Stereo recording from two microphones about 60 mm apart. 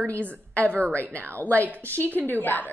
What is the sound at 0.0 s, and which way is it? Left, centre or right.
A woman's voice, left.